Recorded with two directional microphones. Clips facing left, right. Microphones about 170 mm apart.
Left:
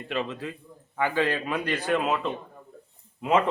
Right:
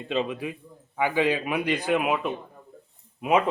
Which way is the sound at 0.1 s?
15° right (ahead or behind).